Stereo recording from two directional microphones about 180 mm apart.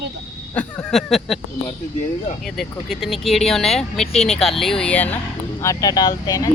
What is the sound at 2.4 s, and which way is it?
Speech, centre (ahead or behind).